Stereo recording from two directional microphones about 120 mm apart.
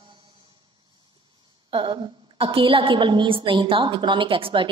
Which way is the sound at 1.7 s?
45° right (ahead or behind).